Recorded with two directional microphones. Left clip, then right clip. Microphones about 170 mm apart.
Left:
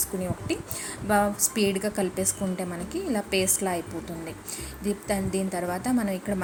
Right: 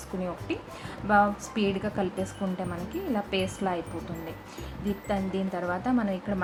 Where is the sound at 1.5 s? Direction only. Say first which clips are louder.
Left 3 dB; 15° left (ahead or behind).